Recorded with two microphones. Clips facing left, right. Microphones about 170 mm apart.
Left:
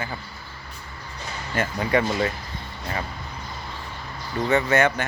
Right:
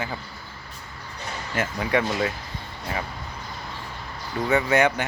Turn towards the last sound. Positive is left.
turn(degrees=-15)  # may be behind; listen again after turning